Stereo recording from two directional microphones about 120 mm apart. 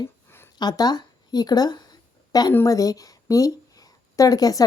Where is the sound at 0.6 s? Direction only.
35° left (ahead or behind).